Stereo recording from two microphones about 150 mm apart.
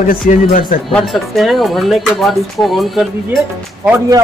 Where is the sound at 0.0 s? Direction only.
65° left (ahead or behind).